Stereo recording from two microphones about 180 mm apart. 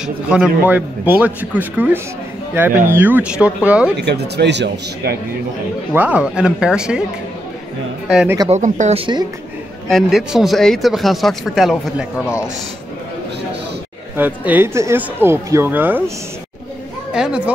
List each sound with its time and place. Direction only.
0.0 s a man's voice: 5° right (ahead or behind)
4.0 s a man's voice: 70° right (ahead or behind)
5.9 s speech: 5° right (ahead or behind)
8.1 s speech: 5° right (ahead or behind)
8.5 s a man's voice: 45° right (ahead or behind)
9.8 s speech: centre (ahead or behind)
14.1 s a man's voice: 10° right (ahead or behind)
17.1 s speech: 5° right (ahead or behind)